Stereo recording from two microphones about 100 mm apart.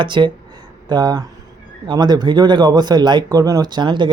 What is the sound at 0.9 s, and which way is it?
Speech, 40° right (ahead or behind).